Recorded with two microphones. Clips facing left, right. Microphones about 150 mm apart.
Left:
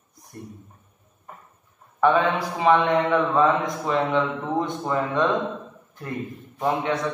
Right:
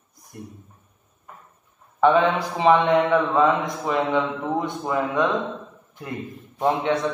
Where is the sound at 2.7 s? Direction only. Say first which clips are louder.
Right 2 dB; 10° right (ahead or behind).